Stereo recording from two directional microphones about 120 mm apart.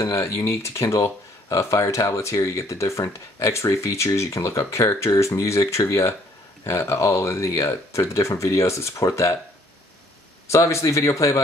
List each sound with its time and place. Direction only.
0.0 s speech: 25° left (ahead or behind)
10.5 s speech: 25° left (ahead or behind)